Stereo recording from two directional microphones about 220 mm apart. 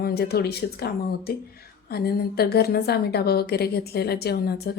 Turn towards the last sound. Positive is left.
turn(degrees=45)  # may be behind; listen again after turning